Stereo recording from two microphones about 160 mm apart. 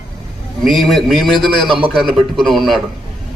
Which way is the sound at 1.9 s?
Centre (ahead or behind).